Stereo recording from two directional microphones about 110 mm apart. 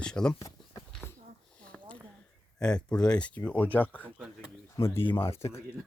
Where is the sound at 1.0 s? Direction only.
25° left (ahead or behind).